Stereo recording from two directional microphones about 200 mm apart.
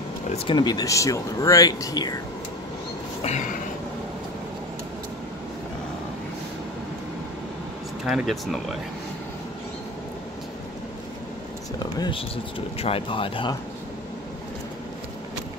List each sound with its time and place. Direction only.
0.5 s speech: 20° left (ahead or behind)
8.0 s speech: centre (ahead or behind)
11.8 s speech: 25° left (ahead or behind)